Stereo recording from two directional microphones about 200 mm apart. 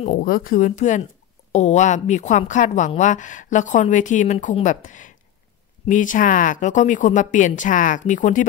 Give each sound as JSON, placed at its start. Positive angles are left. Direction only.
{"t": 0.0, "sound": "a woman's voice", "side_deg": 40}